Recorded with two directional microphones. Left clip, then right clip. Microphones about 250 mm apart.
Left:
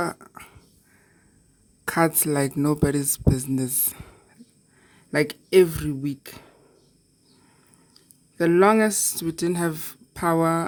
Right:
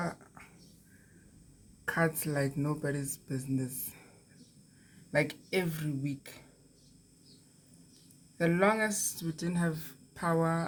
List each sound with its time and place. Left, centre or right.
0.0 s a sound: left
1.8 s speech: left
5.1 s speech: left
8.4 s speech: left